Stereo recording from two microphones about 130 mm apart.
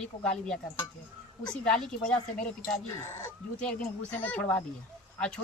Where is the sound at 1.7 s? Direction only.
5° left (ahead or behind).